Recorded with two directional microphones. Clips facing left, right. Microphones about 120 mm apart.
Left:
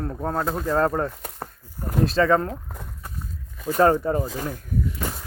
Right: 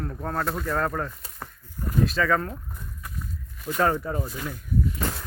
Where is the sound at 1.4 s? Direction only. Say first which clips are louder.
Left 3 dB; 35° left (ahead or behind).